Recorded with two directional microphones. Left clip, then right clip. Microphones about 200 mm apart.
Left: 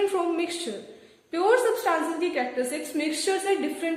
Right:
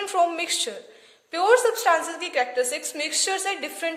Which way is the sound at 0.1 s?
50° right (ahead or behind).